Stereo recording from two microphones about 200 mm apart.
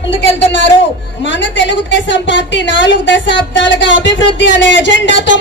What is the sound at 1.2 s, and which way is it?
A woman's voice, 65° left (ahead or behind).